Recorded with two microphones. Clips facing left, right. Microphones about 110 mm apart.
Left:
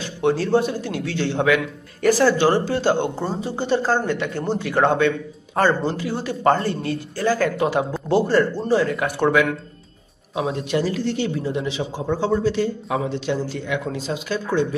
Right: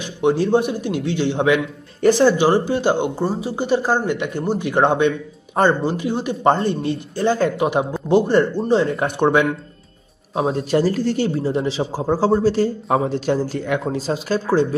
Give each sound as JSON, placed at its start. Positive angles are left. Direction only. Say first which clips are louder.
{"t": 0.0, "sound": "a man's voice", "louder": "right 3 dB", "side_deg": -15}
{"t": 10.3, "sound": "speech", "louder": "right 4 dB", "side_deg": -35}